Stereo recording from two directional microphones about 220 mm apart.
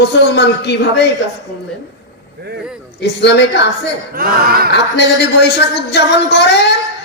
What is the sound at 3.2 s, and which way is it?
Speech, 50° left (ahead or behind).